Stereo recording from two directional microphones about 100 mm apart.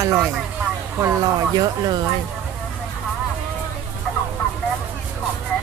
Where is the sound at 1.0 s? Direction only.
40° right (ahead or behind).